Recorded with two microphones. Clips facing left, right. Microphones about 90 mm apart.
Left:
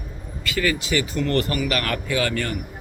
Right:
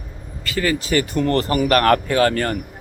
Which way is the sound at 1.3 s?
35° right (ahead or behind).